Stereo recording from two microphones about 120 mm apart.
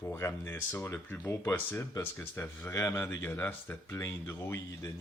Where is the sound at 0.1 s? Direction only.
20° left (ahead or behind).